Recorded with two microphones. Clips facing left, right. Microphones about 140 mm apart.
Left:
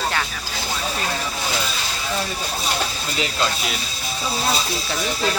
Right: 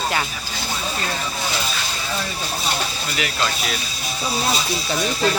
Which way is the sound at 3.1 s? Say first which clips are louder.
Left 1 dB; 25° left (ahead or behind).